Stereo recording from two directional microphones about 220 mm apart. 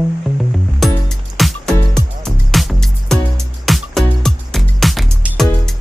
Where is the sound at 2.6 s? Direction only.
Centre (ahead or behind).